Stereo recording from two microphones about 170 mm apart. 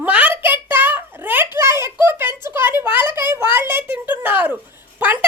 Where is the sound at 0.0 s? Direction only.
10° right (ahead or behind).